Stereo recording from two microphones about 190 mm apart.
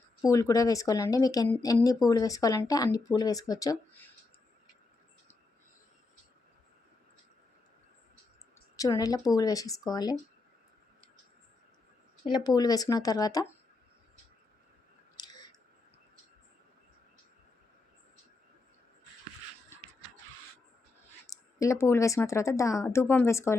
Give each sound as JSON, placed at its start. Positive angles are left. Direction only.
{"t": 0.3, "sound": "a woman's voice", "side_deg": 15}
{"t": 8.7, "sound": "a woman's voice", "side_deg": 20}
{"t": 12.2, "sound": "speech", "side_deg": 20}
{"t": 15.2, "sound": "a sound", "side_deg": 20}
{"t": 21.2, "sound": "a woman's voice", "side_deg": 15}